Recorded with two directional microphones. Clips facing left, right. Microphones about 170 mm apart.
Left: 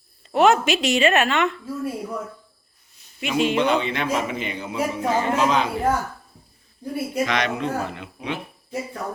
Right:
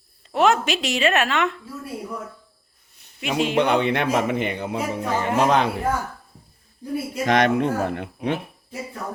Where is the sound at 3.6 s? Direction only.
60° right (ahead or behind).